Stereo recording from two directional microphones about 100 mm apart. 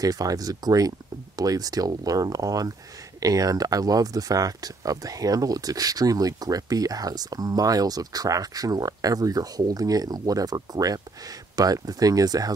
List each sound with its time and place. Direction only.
0.0 s speech: 40° right (ahead or behind)